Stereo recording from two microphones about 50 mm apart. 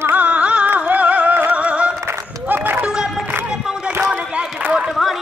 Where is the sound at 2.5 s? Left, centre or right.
Right.